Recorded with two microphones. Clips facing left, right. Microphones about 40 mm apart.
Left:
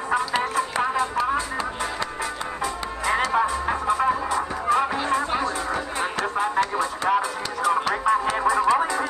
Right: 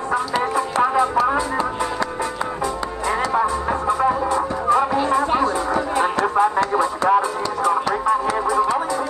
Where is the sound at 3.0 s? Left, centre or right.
Centre.